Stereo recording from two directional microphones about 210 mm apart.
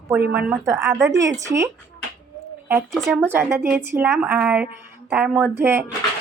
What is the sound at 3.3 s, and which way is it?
A woman's voice, 10° right (ahead or behind).